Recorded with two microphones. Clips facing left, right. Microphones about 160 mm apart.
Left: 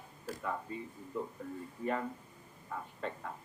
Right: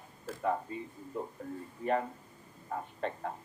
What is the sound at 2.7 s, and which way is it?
Speech, 45° right (ahead or behind).